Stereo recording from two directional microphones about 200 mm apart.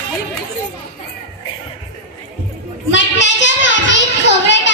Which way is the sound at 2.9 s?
65° left (ahead or behind).